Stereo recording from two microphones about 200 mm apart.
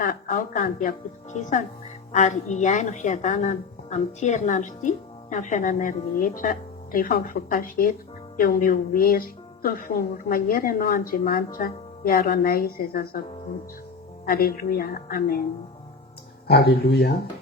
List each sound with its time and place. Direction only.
0.0 s a woman's voice: 45° left (ahead or behind)
14.3 s a woman's voice: 50° left (ahead or behind)
16.5 s a woman's voice: 55° left (ahead or behind)